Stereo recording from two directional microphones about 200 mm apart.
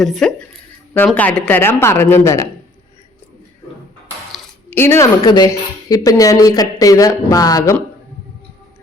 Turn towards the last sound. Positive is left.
turn(degrees=20)  # may be behind; listen again after turning